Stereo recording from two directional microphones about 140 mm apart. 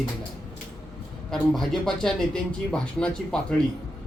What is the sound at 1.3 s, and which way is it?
A man's voice, centre (ahead or behind).